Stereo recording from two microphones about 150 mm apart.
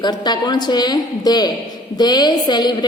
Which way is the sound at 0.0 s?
30° left (ahead or behind).